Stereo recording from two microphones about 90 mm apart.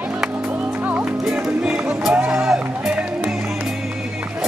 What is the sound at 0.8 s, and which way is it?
Music, 15° right (ahead or behind).